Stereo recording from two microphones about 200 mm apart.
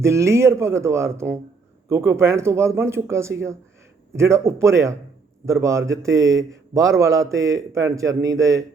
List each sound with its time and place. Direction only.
0.0 s a man's voice: 15° right (ahead or behind)